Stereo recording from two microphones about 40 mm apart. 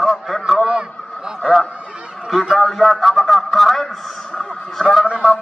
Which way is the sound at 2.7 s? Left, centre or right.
Centre.